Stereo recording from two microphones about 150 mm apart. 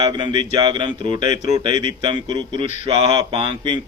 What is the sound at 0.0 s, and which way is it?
Speech, 30° right (ahead or behind).